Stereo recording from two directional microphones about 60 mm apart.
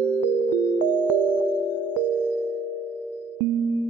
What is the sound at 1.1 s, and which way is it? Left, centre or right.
Music, right.